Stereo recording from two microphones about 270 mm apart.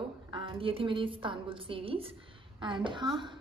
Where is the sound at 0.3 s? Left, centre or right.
Centre.